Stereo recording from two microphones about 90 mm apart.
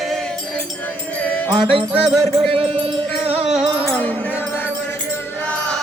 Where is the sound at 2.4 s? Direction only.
90° right.